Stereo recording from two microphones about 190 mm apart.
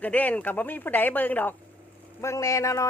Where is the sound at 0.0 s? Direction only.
10° left (ahead or behind).